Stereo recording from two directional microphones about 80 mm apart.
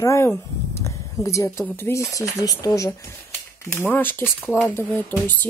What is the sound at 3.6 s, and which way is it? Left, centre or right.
Speech, left.